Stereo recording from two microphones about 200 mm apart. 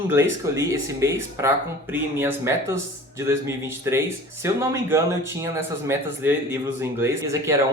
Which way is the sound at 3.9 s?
15° right (ahead or behind).